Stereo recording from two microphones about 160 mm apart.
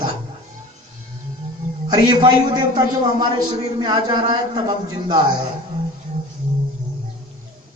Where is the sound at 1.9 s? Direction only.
25° right (ahead or behind).